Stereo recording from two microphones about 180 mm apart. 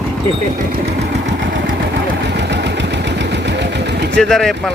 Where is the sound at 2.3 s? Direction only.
70° right (ahead or behind).